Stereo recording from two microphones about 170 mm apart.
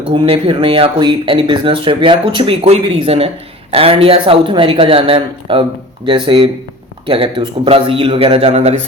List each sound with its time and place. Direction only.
0.0 s speech: 30° right (ahead or behind)